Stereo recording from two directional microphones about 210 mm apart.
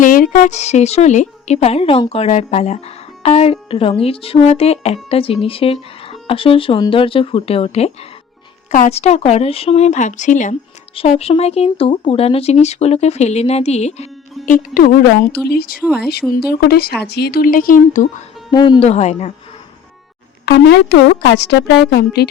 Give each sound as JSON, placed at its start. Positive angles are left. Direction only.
{"t": 0.0, "sound": "speech", "side_deg": 40}
{"t": 18.5, "sound": "speech", "side_deg": 20}
{"t": 20.4, "sound": "speech", "side_deg": 55}